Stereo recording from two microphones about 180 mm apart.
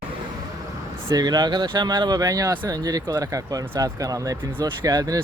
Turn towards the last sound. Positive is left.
turn(degrees=-20)  # may be behind; listen again after turning